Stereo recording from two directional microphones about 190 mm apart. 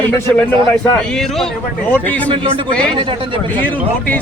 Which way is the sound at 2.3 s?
25° right (ahead or behind).